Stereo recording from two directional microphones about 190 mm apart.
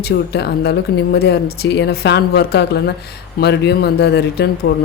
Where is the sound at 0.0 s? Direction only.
60° left (ahead or behind).